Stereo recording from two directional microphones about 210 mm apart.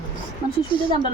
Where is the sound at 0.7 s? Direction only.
25° left (ahead or behind).